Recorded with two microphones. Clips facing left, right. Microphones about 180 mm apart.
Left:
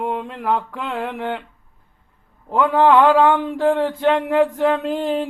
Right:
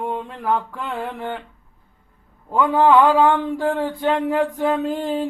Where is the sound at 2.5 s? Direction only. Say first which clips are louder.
Left 1 dB; centre (ahead or behind).